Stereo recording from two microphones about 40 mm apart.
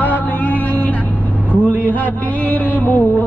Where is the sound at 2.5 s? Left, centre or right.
Left.